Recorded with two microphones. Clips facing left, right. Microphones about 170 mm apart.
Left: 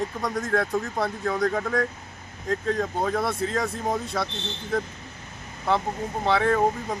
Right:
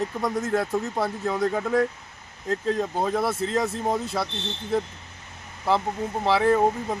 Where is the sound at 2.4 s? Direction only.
25° right (ahead or behind).